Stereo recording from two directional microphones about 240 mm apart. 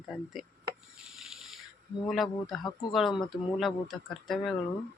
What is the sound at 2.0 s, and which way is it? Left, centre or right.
Speech, centre.